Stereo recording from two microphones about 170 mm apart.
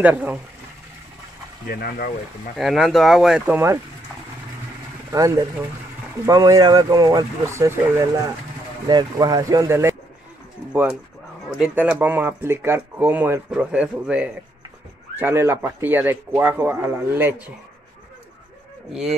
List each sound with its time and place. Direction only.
0.0 s speech: 10° right (ahead or behind)
1.7 s speech: 60° left (ahead or behind)
2.5 s speech: centre (ahead or behind)
5.1 s speech: 20° right (ahead or behind)
18.9 s speech: centre (ahead or behind)